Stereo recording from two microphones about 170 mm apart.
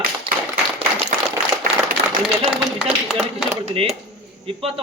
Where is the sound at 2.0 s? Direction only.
75° right (ahead or behind).